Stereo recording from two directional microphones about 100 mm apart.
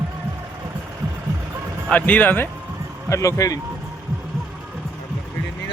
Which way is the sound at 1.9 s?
15° left (ahead or behind).